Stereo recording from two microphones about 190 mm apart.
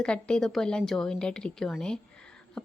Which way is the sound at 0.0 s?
5° left (ahead or behind).